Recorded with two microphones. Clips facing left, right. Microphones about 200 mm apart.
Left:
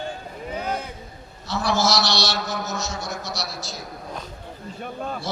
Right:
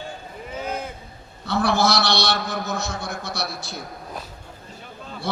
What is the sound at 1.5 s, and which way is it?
A man's voice, 55° right (ahead or behind).